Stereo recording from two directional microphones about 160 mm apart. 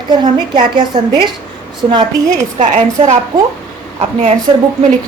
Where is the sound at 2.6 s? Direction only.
50° right (ahead or behind).